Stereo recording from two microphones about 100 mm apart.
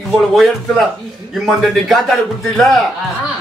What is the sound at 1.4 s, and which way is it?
Speech, centre (ahead or behind).